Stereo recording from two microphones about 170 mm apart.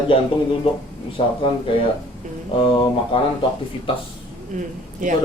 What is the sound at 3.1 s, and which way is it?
Speech, 30° left (ahead or behind).